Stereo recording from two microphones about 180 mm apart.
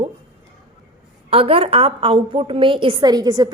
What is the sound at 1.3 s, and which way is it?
A woman's voice, 30° right (ahead or behind).